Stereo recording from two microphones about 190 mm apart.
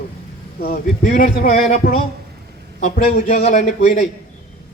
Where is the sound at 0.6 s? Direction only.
45° left (ahead or behind).